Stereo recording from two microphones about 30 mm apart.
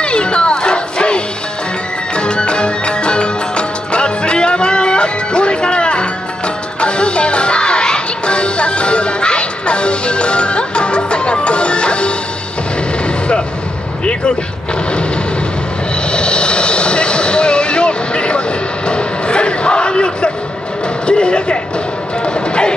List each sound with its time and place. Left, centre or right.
0.0 s music: left
16.1 s vehicle: left
18.9 s crowd: left
21.1 s a sound: left
22.2 s music: left